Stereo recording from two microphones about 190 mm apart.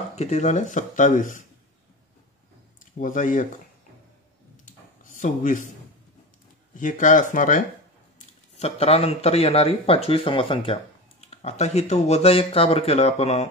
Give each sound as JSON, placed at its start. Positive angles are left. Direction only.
{"t": 0.1, "sound": "speech", "side_deg": 35}
{"t": 2.8, "sound": "speech", "side_deg": 45}
{"t": 4.6, "sound": "a sound", "side_deg": 45}
{"t": 6.7, "sound": "speech", "side_deg": 40}
{"t": 8.5, "sound": "speech", "side_deg": 30}